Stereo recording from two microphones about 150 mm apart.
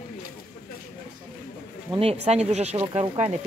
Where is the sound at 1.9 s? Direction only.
45° right (ahead or behind).